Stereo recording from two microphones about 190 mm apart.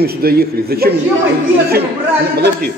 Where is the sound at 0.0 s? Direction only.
55° right (ahead or behind).